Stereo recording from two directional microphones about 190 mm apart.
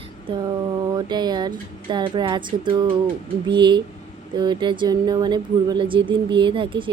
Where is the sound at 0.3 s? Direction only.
20° right (ahead or behind).